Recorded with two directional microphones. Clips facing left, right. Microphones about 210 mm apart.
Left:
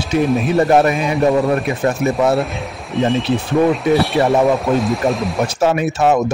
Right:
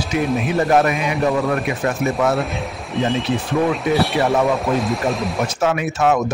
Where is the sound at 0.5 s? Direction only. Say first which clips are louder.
Left 3 dB; 30° left (ahead or behind).